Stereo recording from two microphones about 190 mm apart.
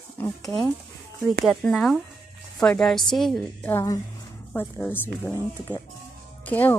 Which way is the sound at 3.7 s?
15° left (ahead or behind).